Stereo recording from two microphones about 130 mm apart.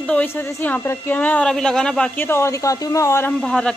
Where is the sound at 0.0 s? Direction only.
10° left (ahead or behind).